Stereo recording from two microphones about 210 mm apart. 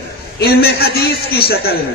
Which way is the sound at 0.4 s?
50° left (ahead or behind).